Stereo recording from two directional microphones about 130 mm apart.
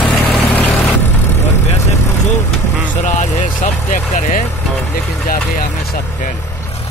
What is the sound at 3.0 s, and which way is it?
Vehicle, 70° left (ahead or behind).